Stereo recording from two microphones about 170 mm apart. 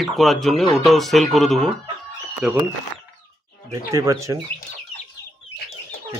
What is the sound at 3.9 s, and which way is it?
Speech, 20° right (ahead or behind).